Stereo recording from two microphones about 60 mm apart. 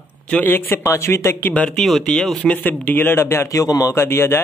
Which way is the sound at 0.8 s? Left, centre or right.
Left.